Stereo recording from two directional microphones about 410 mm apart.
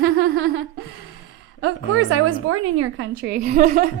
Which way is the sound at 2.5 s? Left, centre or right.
Right.